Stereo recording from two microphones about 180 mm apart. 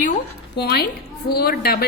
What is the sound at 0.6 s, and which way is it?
A woman's voice, 65° left (ahead or behind).